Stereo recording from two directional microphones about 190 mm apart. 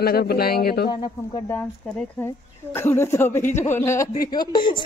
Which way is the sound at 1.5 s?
5° left (ahead or behind).